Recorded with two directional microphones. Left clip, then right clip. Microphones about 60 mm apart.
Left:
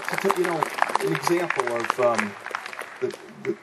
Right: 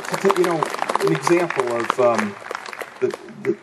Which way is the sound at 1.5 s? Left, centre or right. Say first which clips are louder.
Right 3 dB; left.